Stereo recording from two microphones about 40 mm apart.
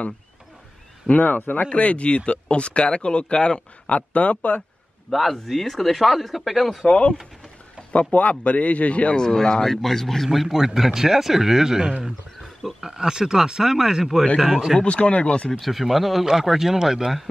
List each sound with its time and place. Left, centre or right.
1.0 s a man's voice: left
4.1 s a man's voice: left
5.1 s a man's voice: centre
6.9 s a man's voice: left
9.1 s a man's voice: centre
14.9 s speech: left
15.6 s speech: centre